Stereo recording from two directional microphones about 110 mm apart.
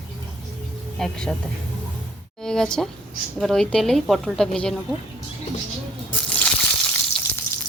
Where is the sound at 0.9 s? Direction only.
5° left (ahead or behind).